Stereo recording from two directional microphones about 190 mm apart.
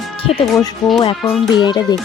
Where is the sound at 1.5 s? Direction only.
25° left (ahead or behind).